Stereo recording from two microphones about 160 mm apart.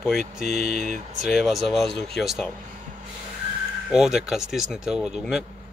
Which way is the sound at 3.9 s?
5° right (ahead or behind).